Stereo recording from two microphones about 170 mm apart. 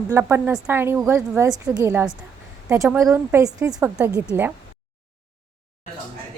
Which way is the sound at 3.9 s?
5° right (ahead or behind).